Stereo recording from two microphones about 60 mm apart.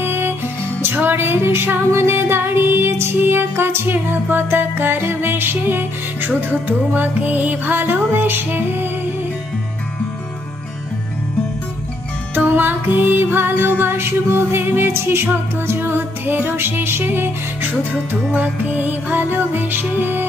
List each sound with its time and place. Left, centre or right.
0.0 s music: right
12.4 s music: right
18.3 s music: right